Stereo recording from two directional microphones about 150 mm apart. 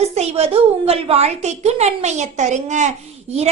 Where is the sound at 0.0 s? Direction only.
45° right (ahead or behind).